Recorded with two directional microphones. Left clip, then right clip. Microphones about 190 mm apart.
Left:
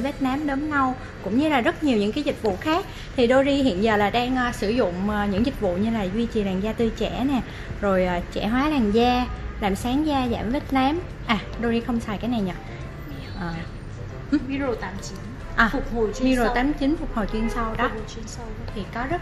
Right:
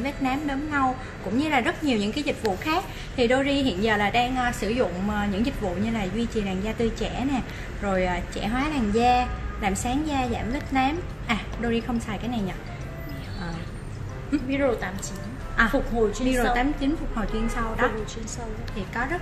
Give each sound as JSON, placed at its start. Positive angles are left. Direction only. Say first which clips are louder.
{"t": 0.0, "sound": "a woman's voice", "louder": "left 2 dB", "side_deg": 40}
{"t": 14.5, "sound": "a woman's voice", "louder": "right 2 dB", "side_deg": -35}
{"t": 15.6, "sound": "a woman's voice", "louder": "left 1 dB", "side_deg": 40}